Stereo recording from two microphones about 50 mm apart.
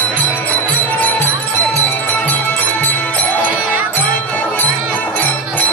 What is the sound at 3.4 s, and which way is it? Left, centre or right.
Music, right.